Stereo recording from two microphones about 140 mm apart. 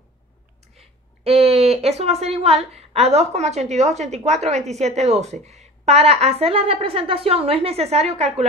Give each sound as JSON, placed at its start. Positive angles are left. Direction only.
{"t": 1.2, "sound": "a woman's voice", "side_deg": -45}